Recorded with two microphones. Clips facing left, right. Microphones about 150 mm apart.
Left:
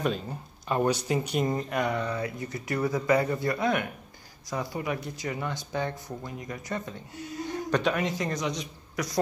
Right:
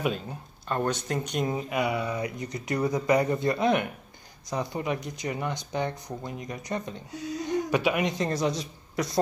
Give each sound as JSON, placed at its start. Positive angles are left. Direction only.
{"t": 0.0, "sound": "speech", "side_deg": 0}